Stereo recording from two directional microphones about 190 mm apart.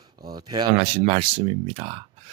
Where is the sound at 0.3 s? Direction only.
20° right (ahead or behind).